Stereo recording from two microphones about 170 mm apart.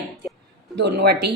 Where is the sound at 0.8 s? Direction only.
75° right (ahead or behind).